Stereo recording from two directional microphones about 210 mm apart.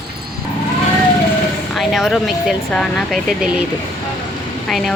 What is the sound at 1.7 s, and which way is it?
Speech, centre (ahead or behind).